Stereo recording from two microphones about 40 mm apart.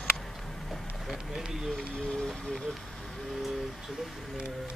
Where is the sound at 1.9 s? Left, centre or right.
Left.